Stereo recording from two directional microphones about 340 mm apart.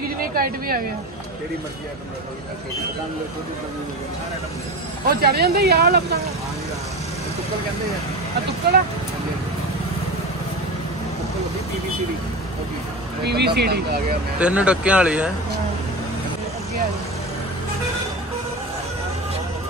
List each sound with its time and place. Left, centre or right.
0.4 s speech: right
5.0 s speech: right
13.2 s speech: right
14.4 s speech: centre